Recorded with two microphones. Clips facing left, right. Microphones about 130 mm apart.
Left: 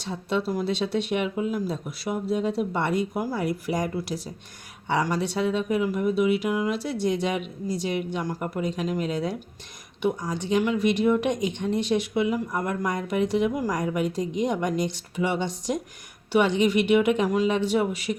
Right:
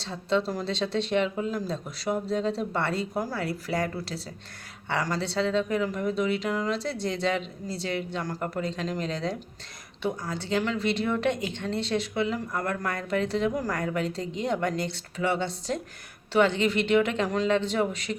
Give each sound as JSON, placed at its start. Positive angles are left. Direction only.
{"t": 0.0, "sound": "speech", "side_deg": 15}